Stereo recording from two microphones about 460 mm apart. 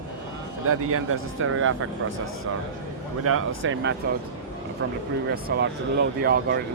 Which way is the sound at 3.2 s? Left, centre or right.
Right.